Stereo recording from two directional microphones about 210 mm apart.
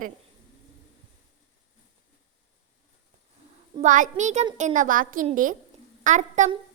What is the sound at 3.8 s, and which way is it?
A woman's voice, 35° right (ahead or behind).